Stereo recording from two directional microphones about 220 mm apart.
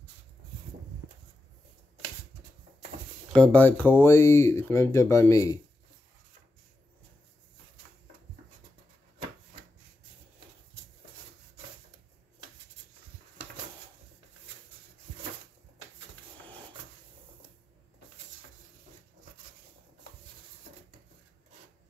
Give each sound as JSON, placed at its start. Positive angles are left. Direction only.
{"t": 3.3, "sound": "speech", "side_deg": 5}